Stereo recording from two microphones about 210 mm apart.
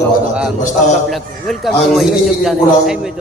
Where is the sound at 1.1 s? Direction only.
Centre (ahead or behind).